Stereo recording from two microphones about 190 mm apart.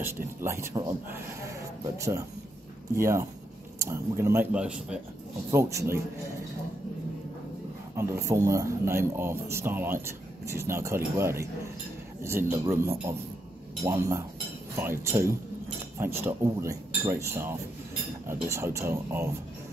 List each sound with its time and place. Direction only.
0.4 s speech: 15° right (ahead or behind)
3.0 s speech: 15° right (ahead or behind)
7.9 s speech: 15° right (ahead or behind)